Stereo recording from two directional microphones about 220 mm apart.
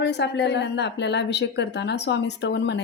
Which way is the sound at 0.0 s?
50° left (ahead or behind).